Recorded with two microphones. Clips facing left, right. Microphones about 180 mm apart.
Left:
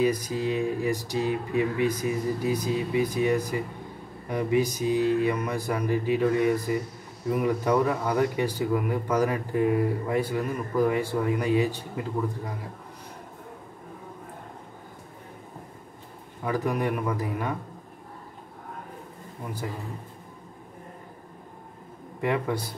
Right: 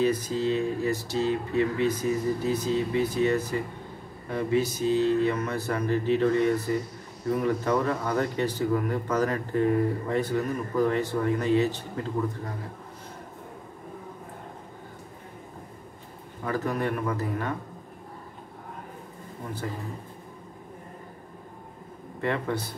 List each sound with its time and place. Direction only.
0.0 s speech: 15° left (ahead or behind)
16.4 s speech: 15° left (ahead or behind)
22.2 s speech: 10° left (ahead or behind)